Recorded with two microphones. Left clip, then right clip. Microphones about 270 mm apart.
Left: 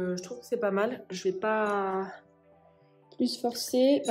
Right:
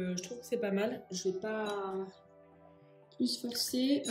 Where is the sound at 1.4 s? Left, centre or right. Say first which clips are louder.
Left 9 dB; left.